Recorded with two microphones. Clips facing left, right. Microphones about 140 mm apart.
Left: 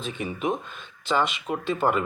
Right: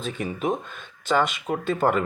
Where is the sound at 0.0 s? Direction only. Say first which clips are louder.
Right 1 dB; 40° right (ahead or behind).